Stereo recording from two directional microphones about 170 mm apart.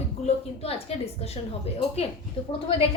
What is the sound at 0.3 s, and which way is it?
A woman's voice, 35° left (ahead or behind).